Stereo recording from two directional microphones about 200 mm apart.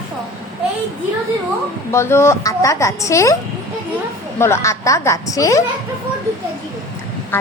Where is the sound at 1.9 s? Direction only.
15° left (ahead or behind).